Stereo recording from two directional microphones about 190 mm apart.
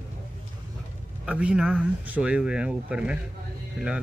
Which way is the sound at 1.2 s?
5° right (ahead or behind).